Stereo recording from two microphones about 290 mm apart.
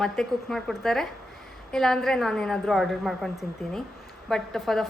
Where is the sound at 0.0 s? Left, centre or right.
Centre.